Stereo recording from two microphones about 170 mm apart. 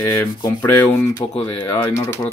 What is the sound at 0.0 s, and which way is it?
Speech, 15° left (ahead or behind).